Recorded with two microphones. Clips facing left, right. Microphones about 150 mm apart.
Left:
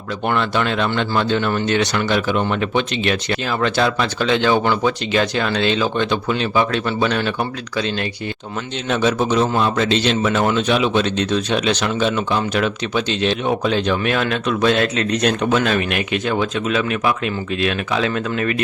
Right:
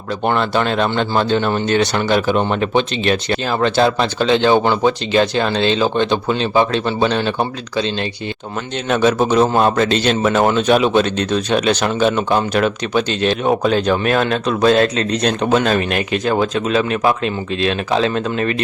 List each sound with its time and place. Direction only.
0.3 s speech: 35° right (ahead or behind)
8.9 s a man's voice: 50° right (ahead or behind); by 18.5 s 30° right (ahead or behind)